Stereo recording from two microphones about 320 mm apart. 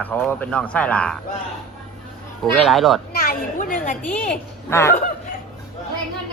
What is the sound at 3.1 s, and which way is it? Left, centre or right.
Speech, left.